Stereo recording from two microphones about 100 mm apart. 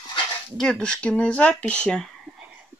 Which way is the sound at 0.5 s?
5° left (ahead or behind).